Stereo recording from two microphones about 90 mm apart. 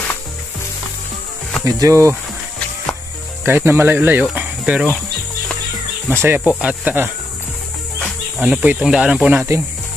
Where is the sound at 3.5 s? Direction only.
25° right (ahead or behind).